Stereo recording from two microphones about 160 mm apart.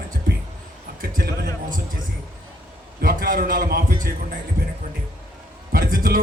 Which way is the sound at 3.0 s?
65° right (ahead or behind).